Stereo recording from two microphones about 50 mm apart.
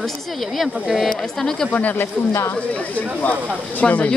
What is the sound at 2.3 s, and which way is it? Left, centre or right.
Speech, left.